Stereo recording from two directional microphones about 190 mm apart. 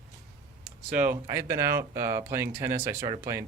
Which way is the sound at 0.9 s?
10° right (ahead or behind).